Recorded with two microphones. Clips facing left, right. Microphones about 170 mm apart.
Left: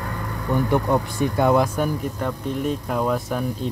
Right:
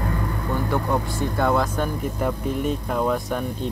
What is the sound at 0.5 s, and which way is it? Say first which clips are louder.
A man's voice: left 4 dB; 15° left (ahead or behind).